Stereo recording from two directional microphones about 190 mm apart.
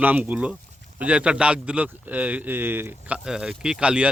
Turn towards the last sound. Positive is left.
turn(degrees=-5)  # may be behind; listen again after turning